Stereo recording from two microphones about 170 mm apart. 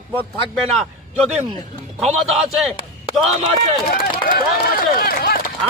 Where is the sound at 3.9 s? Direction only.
55° left (ahead or behind).